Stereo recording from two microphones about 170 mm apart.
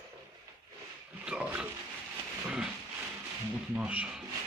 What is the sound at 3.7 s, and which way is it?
Speech, 5° right (ahead or behind).